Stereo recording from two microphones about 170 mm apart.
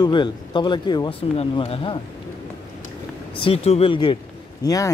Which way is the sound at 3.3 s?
35° left (ahead or behind).